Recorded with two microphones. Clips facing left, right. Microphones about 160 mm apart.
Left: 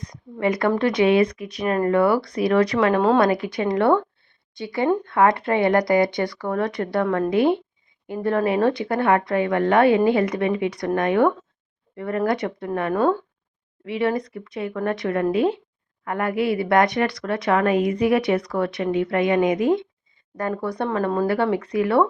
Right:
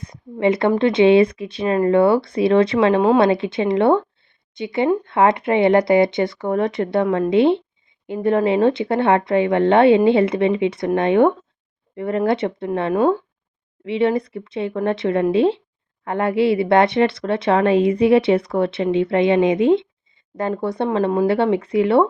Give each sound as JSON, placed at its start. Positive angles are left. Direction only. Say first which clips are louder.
{"t": 0.0, "sound": "a sound", "louder": "right 4 dB", "side_deg": -25}
{"t": 0.8, "sound": "speech", "louder": "right 5 dB", "side_deg": -25}
{"t": 12.9, "sound": "speech", "louder": "right 3 dB", "side_deg": -15}
{"t": 13.8, "sound": "speech", "louder": "right 4 dB", "side_deg": -25}